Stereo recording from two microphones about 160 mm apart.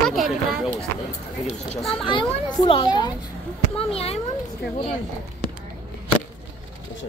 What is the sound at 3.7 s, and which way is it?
Speech, 35° left (ahead or behind).